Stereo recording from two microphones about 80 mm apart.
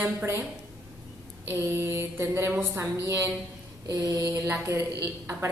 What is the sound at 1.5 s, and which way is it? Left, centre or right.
A woman's voice, right.